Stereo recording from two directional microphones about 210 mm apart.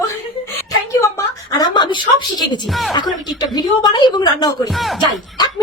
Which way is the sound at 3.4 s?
20° left (ahead or behind).